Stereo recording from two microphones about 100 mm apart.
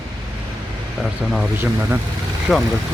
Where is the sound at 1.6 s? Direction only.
20° right (ahead or behind).